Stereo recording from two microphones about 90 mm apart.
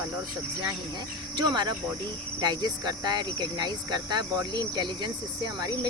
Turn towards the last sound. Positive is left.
turn(degrees=-45)  # may be behind; listen again after turning